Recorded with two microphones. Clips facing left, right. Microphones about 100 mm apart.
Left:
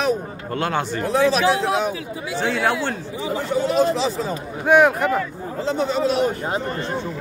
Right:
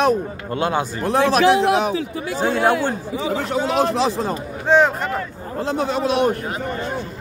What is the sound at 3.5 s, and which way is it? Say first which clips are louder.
Speech: left 2 dB; 80° right.